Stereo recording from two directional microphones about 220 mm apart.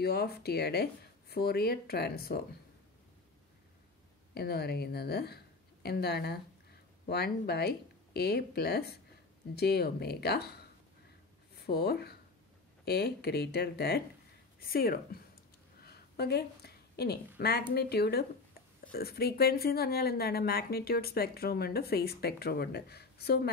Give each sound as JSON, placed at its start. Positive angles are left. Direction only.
{"t": 0.0, "sound": "speech", "side_deg": 45}
{"t": 4.3, "sound": "speech", "side_deg": 45}
{"t": 15.8, "sound": "a sound", "side_deg": 45}
{"t": 17.4, "sound": "speech", "side_deg": 45}